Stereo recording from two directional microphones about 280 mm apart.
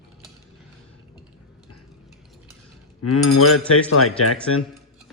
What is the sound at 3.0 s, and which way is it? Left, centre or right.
Speech, left.